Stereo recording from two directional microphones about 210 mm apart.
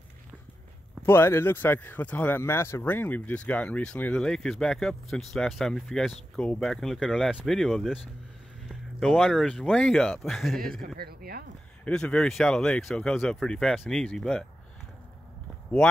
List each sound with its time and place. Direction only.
1.0 s speech: 10° left (ahead or behind)
11.0 s speech: 45° right (ahead or behind)
11.8 s speech: 5° left (ahead or behind)